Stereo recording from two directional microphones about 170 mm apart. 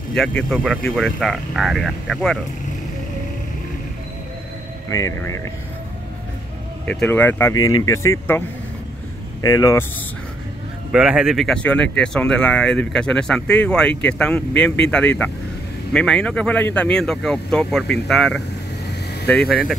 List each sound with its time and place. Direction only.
0.1 s speech: 5° left (ahead or behind)
4.9 s speech: 20° left (ahead or behind)
6.9 s speech: 10° left (ahead or behind)
10.9 s speech: 5° right (ahead or behind)